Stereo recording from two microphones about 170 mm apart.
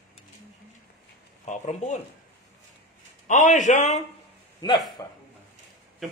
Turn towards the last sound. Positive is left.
turn(degrees=25)  # may be behind; listen again after turning